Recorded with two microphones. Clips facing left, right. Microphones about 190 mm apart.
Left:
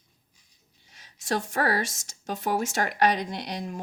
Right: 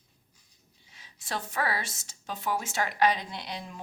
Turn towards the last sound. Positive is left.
turn(degrees=45)  # may be behind; listen again after turning